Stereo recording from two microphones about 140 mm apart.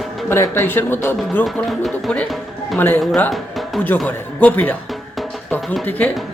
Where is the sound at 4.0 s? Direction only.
10° left (ahead or behind).